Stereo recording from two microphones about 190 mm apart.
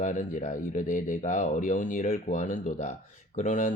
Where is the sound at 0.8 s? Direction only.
40° left (ahead or behind).